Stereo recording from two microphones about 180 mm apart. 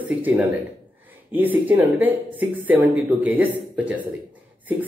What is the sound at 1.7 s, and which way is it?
A man's voice, 10° right (ahead or behind).